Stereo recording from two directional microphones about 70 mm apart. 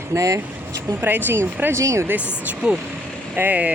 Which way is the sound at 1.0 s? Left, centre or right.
Right.